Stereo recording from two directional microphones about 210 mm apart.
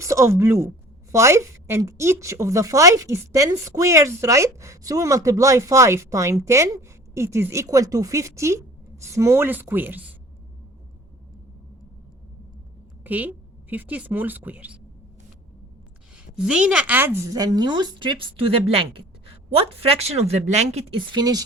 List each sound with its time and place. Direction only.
0.0 s a woman's voice: 15° right (ahead or behind)
13.1 s a woman's voice: 10° right (ahead or behind)
16.1 s a woman's voice: 5° right (ahead or behind)